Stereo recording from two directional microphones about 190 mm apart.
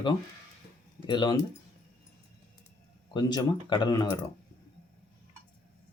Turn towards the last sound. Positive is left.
turn(degrees=25)  # may be behind; listen again after turning